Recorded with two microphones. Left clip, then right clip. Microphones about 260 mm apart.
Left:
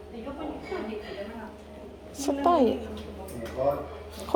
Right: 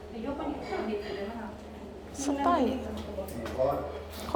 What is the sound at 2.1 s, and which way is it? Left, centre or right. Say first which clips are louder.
Speech: left 4 dB; left.